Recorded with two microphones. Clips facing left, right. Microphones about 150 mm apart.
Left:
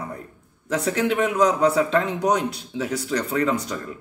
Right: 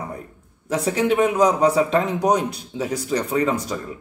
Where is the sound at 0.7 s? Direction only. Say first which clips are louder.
Right 3 dB; 10° right (ahead or behind).